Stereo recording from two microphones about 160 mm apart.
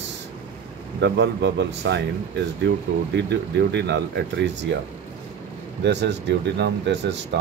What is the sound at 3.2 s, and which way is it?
Speech, 90° right.